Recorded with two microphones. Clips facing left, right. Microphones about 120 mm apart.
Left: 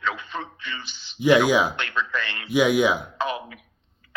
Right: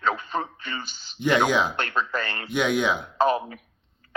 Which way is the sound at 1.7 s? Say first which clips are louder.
Right 1 dB; 40° right (ahead or behind).